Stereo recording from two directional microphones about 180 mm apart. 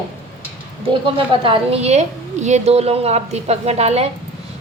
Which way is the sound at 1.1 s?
30° right (ahead or behind).